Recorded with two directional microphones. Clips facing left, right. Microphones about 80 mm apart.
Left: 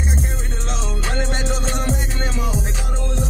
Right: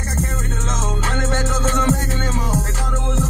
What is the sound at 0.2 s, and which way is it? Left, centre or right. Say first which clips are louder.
Music: right 4 dB; right.